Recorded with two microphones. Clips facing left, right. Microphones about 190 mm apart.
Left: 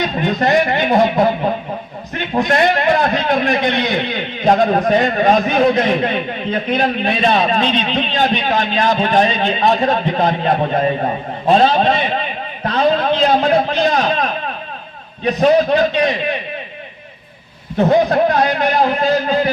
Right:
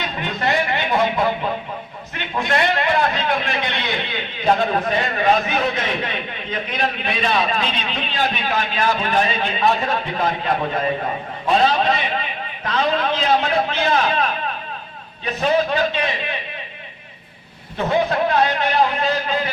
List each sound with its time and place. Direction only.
0.0 s a man's voice: 45° left (ahead or behind)
2.3 s a man's voice: 40° left (ahead or behind)
12.6 s a sound: 35° left (ahead or behind)
15.2 s a man's voice: 40° left (ahead or behind)
17.7 s a man's voice: 40° left (ahead or behind)